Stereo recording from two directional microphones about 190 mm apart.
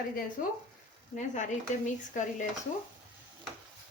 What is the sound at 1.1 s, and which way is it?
Speech, 40° left (ahead or behind).